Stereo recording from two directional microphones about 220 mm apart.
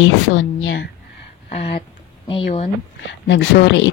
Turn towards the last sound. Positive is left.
turn(degrees=50)  # may be behind; listen again after turning